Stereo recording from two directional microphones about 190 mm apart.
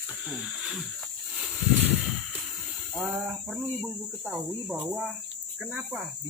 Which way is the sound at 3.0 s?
5° right (ahead or behind).